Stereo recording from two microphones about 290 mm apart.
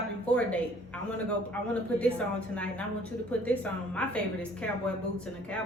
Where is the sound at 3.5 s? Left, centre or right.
Centre.